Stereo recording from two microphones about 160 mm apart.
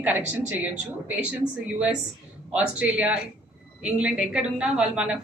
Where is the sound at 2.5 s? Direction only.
10° right (ahead or behind).